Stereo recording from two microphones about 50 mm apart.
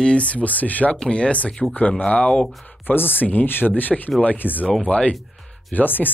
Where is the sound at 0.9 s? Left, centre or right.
Left.